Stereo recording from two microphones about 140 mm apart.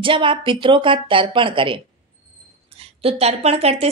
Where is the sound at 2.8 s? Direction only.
45° right (ahead or behind).